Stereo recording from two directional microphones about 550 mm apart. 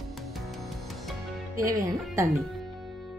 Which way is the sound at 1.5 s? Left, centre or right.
Centre.